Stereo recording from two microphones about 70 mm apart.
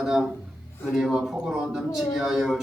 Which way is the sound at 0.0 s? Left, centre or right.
Centre.